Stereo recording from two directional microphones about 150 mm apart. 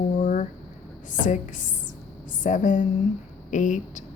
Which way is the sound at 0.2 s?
60° left (ahead or behind).